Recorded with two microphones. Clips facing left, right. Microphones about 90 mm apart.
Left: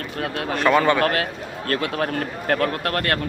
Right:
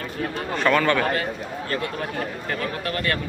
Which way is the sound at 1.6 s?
70° left (ahead or behind).